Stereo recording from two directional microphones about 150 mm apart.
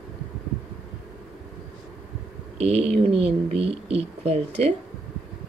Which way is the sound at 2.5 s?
45° right (ahead or behind).